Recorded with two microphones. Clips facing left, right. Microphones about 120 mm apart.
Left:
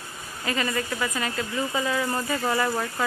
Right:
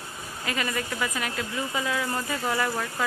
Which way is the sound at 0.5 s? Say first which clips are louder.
Left 3 dB; 5° right (ahead or behind).